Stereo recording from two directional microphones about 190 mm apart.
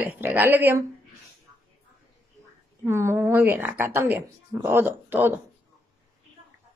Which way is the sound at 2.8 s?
15° right (ahead or behind).